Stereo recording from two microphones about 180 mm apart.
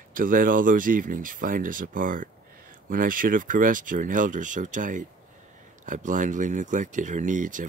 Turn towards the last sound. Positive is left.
turn(degrees=-45)  # may be behind; listen again after turning